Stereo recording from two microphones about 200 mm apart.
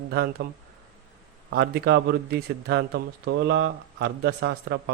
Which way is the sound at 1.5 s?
55° right (ahead or behind).